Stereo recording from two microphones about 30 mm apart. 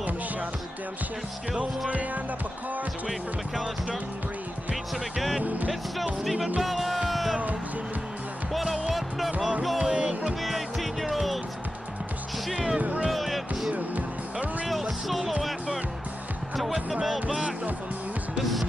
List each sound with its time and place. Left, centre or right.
6.6 s music: centre
9.9 s music: right
10.4 s music: centre
13.1 s music: centre
13.7 s music: right
14.7 s music: centre
17.0 s speech: centre
18.4 s music: centre